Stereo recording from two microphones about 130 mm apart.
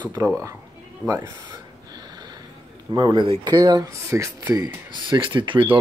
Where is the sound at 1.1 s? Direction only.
30° right (ahead or behind).